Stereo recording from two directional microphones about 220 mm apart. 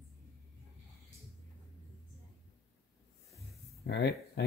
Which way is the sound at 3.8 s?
50° left (ahead or behind).